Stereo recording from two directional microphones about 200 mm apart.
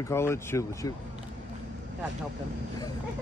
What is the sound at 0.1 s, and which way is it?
Speech, 15° left (ahead or behind).